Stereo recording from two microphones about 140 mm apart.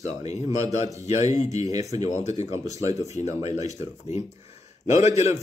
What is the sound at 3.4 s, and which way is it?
Speech, 50° left (ahead or behind).